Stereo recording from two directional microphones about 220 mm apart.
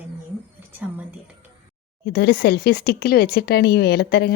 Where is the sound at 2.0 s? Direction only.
45° left (ahead or behind).